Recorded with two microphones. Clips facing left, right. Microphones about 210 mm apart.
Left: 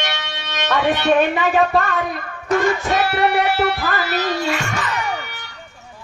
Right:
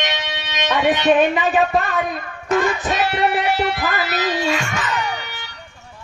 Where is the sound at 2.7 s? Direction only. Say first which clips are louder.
Left 1 dB; 20° right (ahead or behind).